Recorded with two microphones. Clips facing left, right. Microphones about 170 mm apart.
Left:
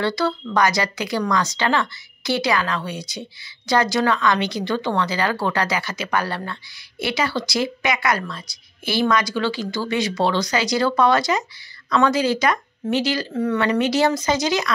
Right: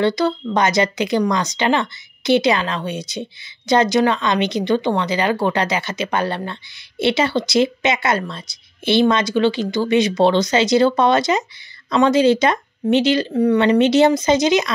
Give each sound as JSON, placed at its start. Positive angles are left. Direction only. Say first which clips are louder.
{"t": 0.0, "sound": "a woman's voice", "louder": "right 4 dB", "side_deg": -20}